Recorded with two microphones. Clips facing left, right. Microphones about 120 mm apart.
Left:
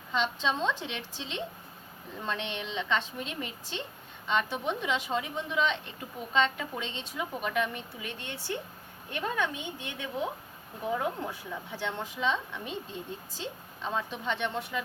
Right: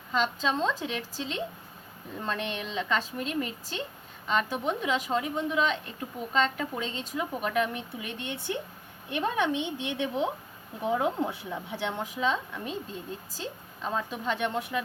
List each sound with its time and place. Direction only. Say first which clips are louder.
0.4 s a woman's voice: right 2 dB; 5° right (ahead or behind)
3.2 s speech: right 6 dB; 50° right (ahead or behind)
4.4 s a woman's voice: right 2 dB; 5° right (ahead or behind)
6.8 s speech: right 4 dB; 45° right (ahead or behind)
7.2 s a woman's voice: right 2 dB; 5° right (ahead or behind)
8.0 s a woman's voice: right 3 dB; 15° right (ahead or behind)